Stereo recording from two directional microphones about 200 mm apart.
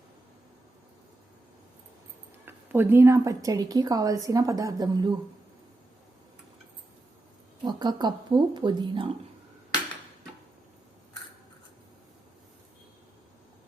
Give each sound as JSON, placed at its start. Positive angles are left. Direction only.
{"t": 2.4, "sound": "a woman's voice", "side_deg": -10}
{"t": 7.6, "sound": "speech", "side_deg": -20}